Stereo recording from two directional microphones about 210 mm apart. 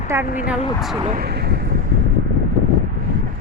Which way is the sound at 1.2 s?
50° right (ahead or behind).